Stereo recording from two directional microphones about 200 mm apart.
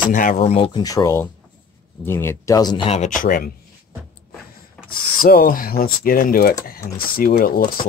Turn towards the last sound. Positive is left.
turn(degrees=45)  # may be behind; listen again after turning